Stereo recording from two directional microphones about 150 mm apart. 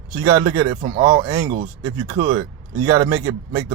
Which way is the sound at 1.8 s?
25° right (ahead or behind).